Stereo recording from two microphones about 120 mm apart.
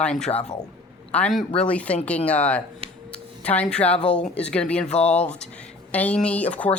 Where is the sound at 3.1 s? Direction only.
10° left (ahead or behind).